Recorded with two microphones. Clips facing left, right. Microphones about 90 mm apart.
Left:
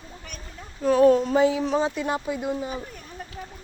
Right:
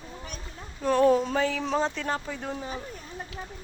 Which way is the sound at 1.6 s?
5° left (ahead or behind).